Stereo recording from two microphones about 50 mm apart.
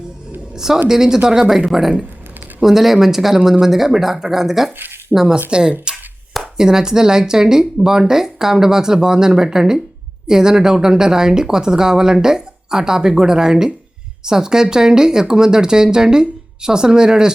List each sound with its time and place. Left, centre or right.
0.5 s speech: centre
5.5 s speech: centre